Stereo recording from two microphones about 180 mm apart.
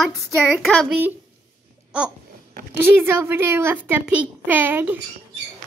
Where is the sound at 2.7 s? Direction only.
10° right (ahead or behind).